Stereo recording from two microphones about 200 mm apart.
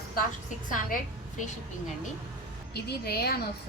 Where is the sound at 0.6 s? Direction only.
40° left (ahead or behind).